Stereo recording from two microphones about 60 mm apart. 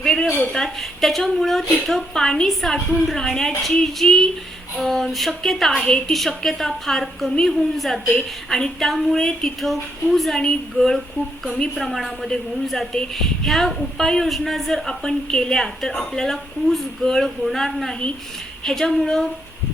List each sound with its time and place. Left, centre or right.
0.0 s a woman's voice: centre
5.7 s a woman's voice: centre
6.1 s a woman's voice: centre